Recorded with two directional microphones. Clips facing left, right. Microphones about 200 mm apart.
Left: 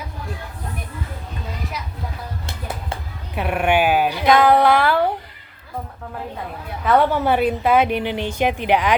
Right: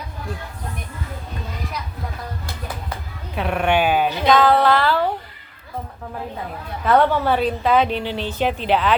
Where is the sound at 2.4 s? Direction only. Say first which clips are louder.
Left 1 dB; 25° left (ahead or behind).